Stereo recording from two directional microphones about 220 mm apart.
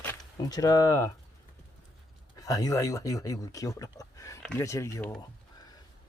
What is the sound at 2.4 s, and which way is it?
Speech, 15° left (ahead or behind).